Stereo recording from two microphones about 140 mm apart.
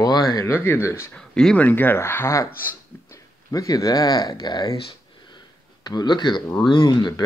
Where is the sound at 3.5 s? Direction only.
25° left (ahead or behind).